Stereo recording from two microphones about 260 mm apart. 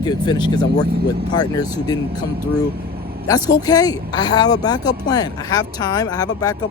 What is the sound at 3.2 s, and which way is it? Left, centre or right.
Speech, centre.